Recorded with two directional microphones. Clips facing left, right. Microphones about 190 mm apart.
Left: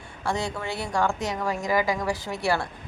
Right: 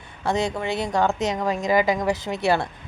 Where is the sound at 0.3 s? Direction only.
20° right (ahead or behind).